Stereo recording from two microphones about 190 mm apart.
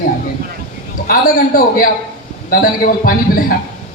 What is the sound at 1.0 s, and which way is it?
A man's voice, 50° left (ahead or behind).